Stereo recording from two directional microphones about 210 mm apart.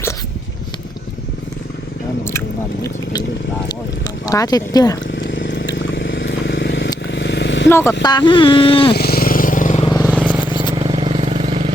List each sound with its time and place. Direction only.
2.8 s speech: 20° left (ahead or behind)
4.3 s speech: 15° left (ahead or behind)
5.1 s vehicle: 60° left (ahead or behind)
7.7 s speech: 10° left (ahead or behind)
9.0 s vehicle: 45° left (ahead or behind)
10.1 s vehicle: 5° right (ahead or behind)
10.8 s vehicle: 25° right (ahead or behind)